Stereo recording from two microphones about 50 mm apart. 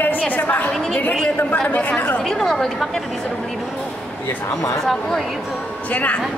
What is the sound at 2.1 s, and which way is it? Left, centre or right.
Speech, centre.